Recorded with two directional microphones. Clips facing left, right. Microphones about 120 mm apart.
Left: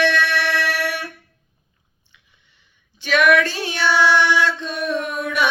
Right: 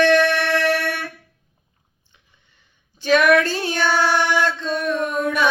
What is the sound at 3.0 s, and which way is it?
Female singing, 40° right (ahead or behind).